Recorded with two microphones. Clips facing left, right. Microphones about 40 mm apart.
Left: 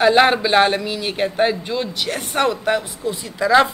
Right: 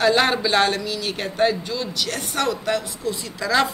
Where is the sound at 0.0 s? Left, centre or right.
Centre.